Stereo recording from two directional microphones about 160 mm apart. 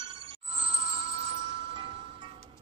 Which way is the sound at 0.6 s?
90° right.